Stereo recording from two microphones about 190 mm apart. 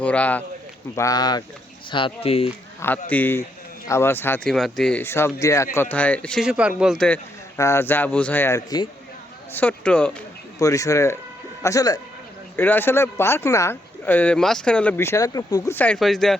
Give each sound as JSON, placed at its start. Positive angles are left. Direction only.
{"t": 0.0, "sound": "speech", "side_deg": 5}
{"t": 0.9, "sound": "speech", "side_deg": 20}
{"t": 3.1, "sound": "speech", "side_deg": 10}
{"t": 10.6, "sound": "speech", "side_deg": 15}